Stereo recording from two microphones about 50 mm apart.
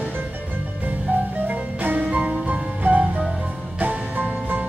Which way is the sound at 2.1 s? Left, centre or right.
Right.